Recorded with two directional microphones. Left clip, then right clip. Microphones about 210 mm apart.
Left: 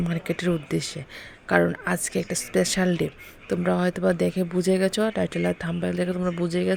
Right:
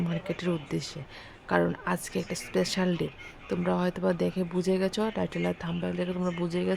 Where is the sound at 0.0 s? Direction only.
15° left (ahead or behind).